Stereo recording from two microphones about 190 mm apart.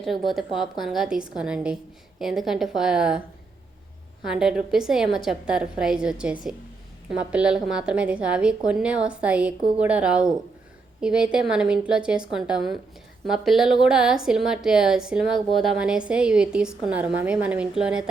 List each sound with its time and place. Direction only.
0.0 s a woman's voice: centre (ahead or behind)
4.3 s a woman's voice: 5° right (ahead or behind)